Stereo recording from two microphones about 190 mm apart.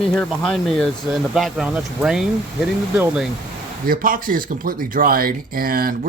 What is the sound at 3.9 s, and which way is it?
Speech, 45° right (ahead or behind).